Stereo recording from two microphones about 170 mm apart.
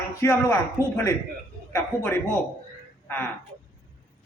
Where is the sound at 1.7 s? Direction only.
15° left (ahead or behind).